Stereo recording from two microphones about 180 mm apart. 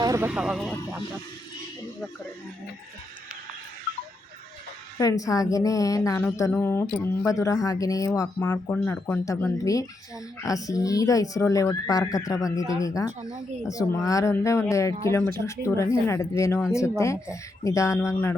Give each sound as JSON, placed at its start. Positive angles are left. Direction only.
{"t": 0.0, "sound": "vehicle", "side_deg": -20}
{"t": 0.3, "sound": "speech", "side_deg": -5}
{"t": 4.9, "sound": "speech", "side_deg": 20}
{"t": 17.6, "sound": "speech", "side_deg": 15}